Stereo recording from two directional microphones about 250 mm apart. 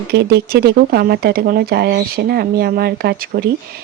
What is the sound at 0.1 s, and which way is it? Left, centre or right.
Speech, right.